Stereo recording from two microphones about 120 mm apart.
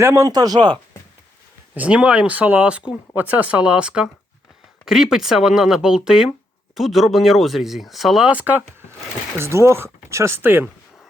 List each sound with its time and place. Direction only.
0.0 s speech: 20° right (ahead or behind)
0.3 s speech: 35° right (ahead or behind)
1.7 s speech: 10° right (ahead or behind)
9.4 s speech: 25° right (ahead or behind)